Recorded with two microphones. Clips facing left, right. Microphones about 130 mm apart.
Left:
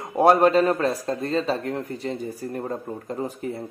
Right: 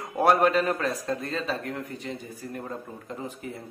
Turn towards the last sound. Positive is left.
turn(degrees=40)  # may be behind; listen again after turning